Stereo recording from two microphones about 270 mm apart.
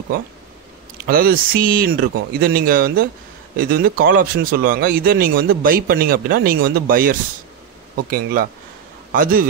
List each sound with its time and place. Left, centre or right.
1.0 s speech: right